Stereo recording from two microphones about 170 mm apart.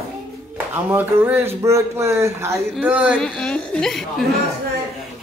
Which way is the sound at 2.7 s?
5° right (ahead or behind).